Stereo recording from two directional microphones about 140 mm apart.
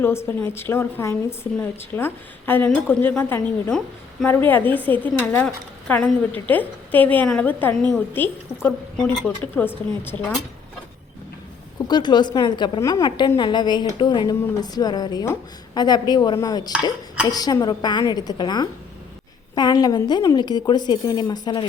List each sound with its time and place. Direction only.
0.0 s a woman's voice: 15° left (ahead or behind)
3.7 s a woman's voice: 5° left (ahead or behind)
4.3 s a woman's voice: 15° left (ahead or behind)
11.9 s a woman's voice: 30° left (ahead or behind)